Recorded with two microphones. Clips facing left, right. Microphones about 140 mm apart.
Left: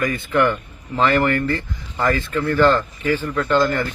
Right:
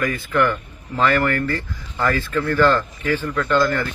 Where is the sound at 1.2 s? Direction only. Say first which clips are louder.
Left 2 dB; 15° left (ahead or behind).